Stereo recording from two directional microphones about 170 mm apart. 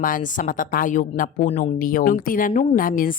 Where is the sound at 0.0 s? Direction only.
50° left (ahead or behind).